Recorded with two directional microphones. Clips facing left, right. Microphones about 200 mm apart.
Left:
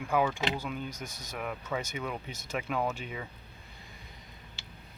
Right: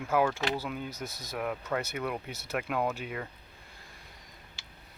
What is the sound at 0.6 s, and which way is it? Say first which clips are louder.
Speech: right 1 dB; 5° right (ahead or behind).